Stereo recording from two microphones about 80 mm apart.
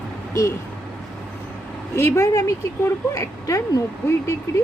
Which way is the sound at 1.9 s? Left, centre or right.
Left.